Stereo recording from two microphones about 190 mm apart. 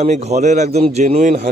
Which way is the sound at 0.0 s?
35° right (ahead or behind).